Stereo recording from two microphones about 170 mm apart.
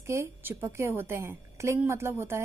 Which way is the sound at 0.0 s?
15° right (ahead or behind).